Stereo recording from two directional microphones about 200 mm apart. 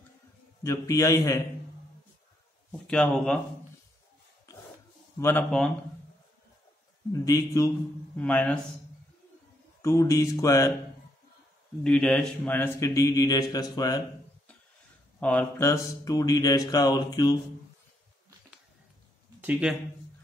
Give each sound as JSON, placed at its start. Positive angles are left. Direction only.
{"t": 0.7, "sound": "a man's voice", "side_deg": 15}
{"t": 2.9, "sound": "speech", "side_deg": 5}
{"t": 5.2, "sound": "a man's voice", "side_deg": 5}
{"t": 7.1, "sound": "a man's voice", "side_deg": 15}
{"t": 9.8, "sound": "a man's voice", "side_deg": 15}
{"t": 11.8, "sound": "a man's voice", "side_deg": 5}
{"t": 15.1, "sound": "a man's voice", "side_deg": 5}
{"t": 19.6, "sound": "speech", "side_deg": -5}